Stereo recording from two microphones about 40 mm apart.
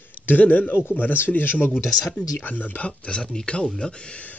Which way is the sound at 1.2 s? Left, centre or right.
Left.